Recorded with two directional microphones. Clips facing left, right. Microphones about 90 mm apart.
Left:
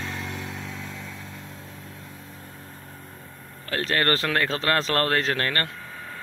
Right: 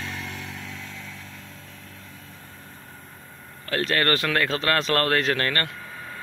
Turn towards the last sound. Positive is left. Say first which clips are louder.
# even
turn(degrees=-10)  # may be behind; listen again after turning